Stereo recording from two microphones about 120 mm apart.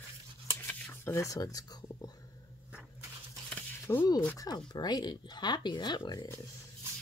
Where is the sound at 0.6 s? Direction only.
15° left (ahead or behind); by 2.1 s 35° left (ahead or behind).